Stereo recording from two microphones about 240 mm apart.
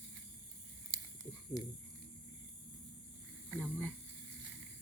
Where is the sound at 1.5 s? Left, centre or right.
Centre.